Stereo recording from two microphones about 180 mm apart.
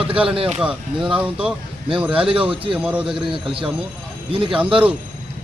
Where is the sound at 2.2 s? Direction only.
30° right (ahead or behind).